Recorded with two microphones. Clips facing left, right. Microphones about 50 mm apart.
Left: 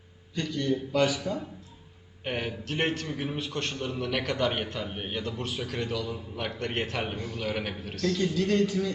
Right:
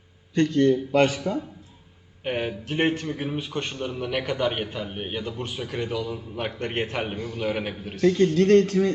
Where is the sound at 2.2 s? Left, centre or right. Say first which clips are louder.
Right 4 dB; centre.